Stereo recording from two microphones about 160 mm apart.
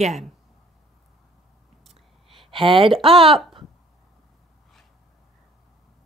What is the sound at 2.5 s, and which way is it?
Speech, 35° right (ahead or behind).